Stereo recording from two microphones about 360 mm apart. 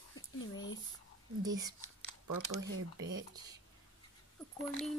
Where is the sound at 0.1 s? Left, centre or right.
Left.